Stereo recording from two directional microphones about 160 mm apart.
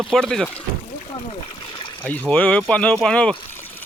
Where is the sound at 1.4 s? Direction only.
35° left (ahead or behind).